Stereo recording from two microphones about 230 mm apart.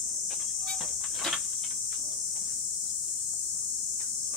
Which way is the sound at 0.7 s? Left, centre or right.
Centre.